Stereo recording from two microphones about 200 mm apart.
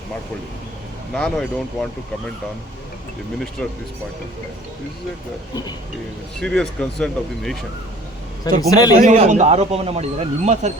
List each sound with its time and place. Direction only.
1.1 s speech: 5° left (ahead or behind)
3.6 s speech: 5° left (ahead or behind)
6.4 s speech: 5° left (ahead or behind)
8.4 s a man's voice: 20° left (ahead or behind)
9.0 s speech: 35° right (ahead or behind)